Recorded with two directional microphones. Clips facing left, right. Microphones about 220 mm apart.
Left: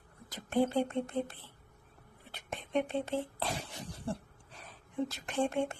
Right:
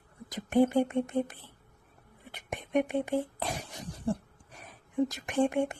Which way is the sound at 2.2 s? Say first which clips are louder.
Right 3 dB; 15° right (ahead or behind).